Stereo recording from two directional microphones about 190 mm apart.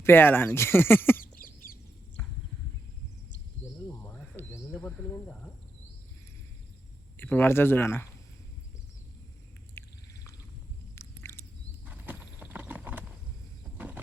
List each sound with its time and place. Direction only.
0.0 s speech: 10° left (ahead or behind)
1.2 s chicken: 50° left (ahead or behind)
2.2 s horse: 10° left (ahead or behind)
4.0 s cricket: 10° left (ahead or behind)
7.2 s speech: 10° left (ahead or behind)
9.8 s a sound: 10° left (ahead or behind)
10.9 s a sound: 15° left (ahead or behind)
11.9 s horse: 10° right (ahead or behind)